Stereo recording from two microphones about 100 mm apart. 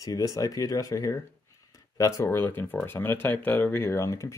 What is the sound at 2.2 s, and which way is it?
Speech, 25° left (ahead or behind).